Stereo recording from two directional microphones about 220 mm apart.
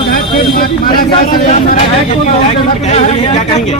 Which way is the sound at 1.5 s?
35° left (ahead or behind).